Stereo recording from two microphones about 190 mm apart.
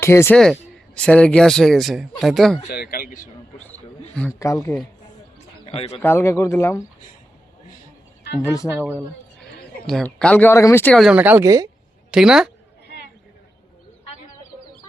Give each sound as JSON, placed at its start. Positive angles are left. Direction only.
{"t": 0.0, "sound": "speech", "side_deg": 15}
{"t": 2.6, "sound": "a man's voice", "side_deg": 55}
{"t": 4.1, "sound": "speech", "side_deg": 5}
{"t": 5.6, "sound": "speech", "side_deg": 30}
{"t": 6.0, "sound": "speech", "side_deg": 15}
{"t": 8.4, "sound": "speech", "side_deg": 15}
{"t": 9.8, "sound": "speech", "side_deg": 5}
{"t": 11.1, "sound": "a woman's voice", "side_deg": -10}
{"t": 12.1, "sound": "speech", "side_deg": -5}